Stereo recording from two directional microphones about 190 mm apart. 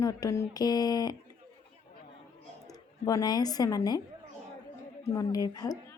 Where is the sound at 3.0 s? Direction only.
20° left (ahead or behind).